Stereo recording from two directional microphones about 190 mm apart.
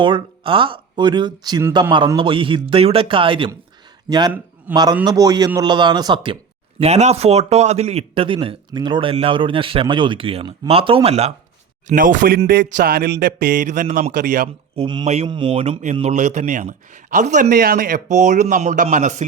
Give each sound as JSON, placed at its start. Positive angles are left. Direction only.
{"t": 0.0, "sound": "a man's voice", "side_deg": -25}
{"t": 4.7, "sound": "a man's voice", "side_deg": -20}
{"t": 6.7, "sound": "a man's voice", "side_deg": -35}
{"t": 11.9, "sound": "speech", "side_deg": -45}
{"t": 14.8, "sound": "a man's voice", "side_deg": -30}